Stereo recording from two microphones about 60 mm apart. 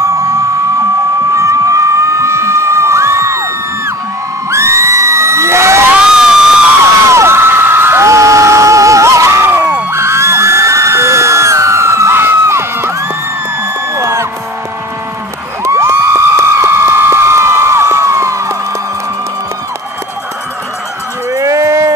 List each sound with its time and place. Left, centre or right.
0.0 s a sound: right
1.3 s crowd: right
4.5 s children shouting: right
5.9 s crowd: centre
7.1 s whoop: right
9.8 s music: right
13.9 s music: right
15.6 s a sound: right
21.3 s a sound: right